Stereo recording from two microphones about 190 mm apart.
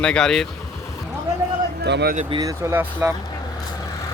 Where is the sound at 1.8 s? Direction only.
60° right (ahead or behind).